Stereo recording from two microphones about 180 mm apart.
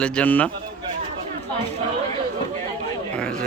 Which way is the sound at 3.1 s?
5° left (ahead or behind).